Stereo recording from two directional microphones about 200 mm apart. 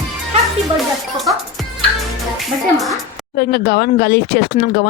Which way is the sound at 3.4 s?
55° left (ahead or behind).